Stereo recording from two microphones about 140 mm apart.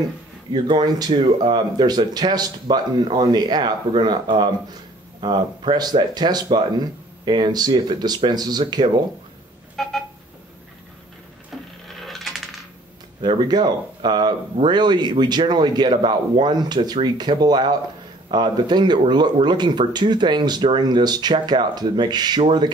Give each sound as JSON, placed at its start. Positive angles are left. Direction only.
{"t": 0.5, "sound": "speech", "side_deg": -35}
{"t": 9.8, "sound": "a sound", "side_deg": 0}
{"t": 11.5, "sound": "wood", "side_deg": 0}
{"t": 12.0, "sound": "coin", "side_deg": 0}
{"t": 13.2, "sound": "speech", "side_deg": -30}